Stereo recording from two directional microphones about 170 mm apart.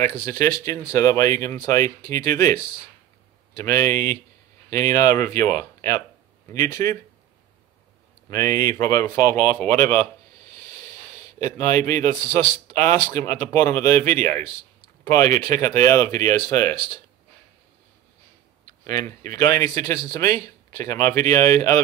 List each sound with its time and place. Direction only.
0.1 s speech: 20° left (ahead or behind)
3.5 s speech: 20° left (ahead or behind)
8.3 s speech: 20° left (ahead or behind)
11.5 s speech: 15° left (ahead or behind)
18.7 s speech: 20° left (ahead or behind)